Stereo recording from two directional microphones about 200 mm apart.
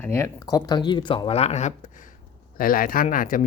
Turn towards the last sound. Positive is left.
turn(degrees=40)  # may be behind; listen again after turning